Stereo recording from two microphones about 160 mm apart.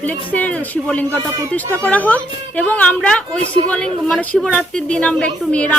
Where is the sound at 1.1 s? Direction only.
20° right (ahead or behind).